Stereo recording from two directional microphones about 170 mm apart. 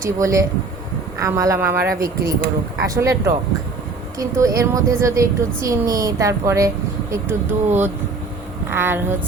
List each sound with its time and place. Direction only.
0.0 s a woman's voice: 15° right (ahead or behind)